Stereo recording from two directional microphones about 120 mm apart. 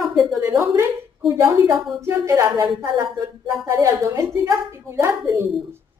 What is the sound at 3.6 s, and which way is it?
A woman's voice, 25° right (ahead or behind).